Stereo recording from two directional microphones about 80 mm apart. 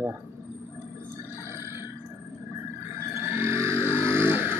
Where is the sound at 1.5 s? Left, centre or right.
Right.